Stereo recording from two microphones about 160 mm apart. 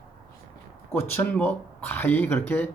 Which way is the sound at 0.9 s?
15° left (ahead or behind).